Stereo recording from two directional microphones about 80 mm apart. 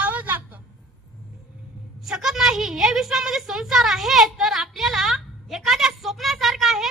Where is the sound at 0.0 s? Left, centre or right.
Right.